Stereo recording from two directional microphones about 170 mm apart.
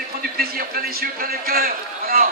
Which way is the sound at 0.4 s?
60° right (ahead or behind).